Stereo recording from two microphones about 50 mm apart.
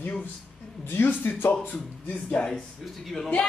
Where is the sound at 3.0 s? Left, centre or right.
Centre.